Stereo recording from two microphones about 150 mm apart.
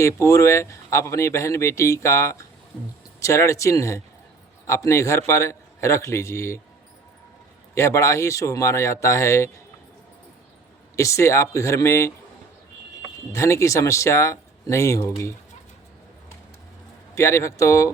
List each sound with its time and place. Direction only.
0.0 s speech: 20° left (ahead or behind)
7.8 s speech: 20° left (ahead or behind)
10.9 s speech: 20° left (ahead or behind)
13.3 s speech: 20° left (ahead or behind)
17.2 s speech: 20° left (ahead or behind)